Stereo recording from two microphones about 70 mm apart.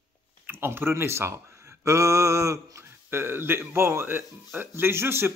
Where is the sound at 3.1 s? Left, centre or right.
Right.